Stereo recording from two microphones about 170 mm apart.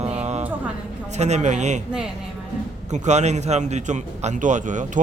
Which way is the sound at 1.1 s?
40° right (ahead or behind).